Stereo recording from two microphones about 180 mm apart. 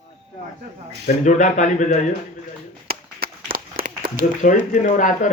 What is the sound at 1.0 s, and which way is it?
Speech, 45° left (ahead or behind).